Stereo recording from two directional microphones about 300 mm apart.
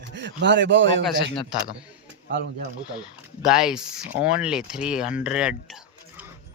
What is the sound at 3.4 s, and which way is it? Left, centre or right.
Speech, centre.